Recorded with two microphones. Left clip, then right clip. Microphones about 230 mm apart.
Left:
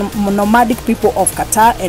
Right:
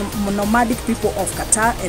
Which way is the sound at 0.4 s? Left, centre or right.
Centre.